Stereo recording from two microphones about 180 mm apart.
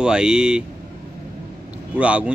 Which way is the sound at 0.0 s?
5° right (ahead or behind).